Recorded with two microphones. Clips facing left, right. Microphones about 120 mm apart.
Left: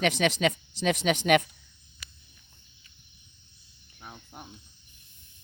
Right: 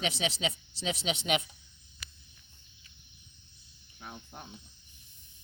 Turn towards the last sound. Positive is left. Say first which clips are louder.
# even
turn(degrees=5)  # may be behind; listen again after turning